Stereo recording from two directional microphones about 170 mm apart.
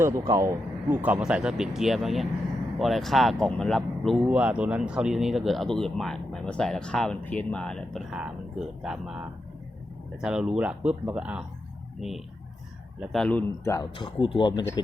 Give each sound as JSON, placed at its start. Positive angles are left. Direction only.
{"t": 0.0, "sound": "speech", "side_deg": -20}
{"t": 13.9, "sound": "speech", "side_deg": 30}